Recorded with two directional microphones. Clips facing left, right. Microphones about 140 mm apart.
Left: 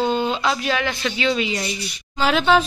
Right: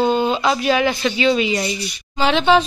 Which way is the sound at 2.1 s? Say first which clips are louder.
Right 2 dB; centre (ahead or behind).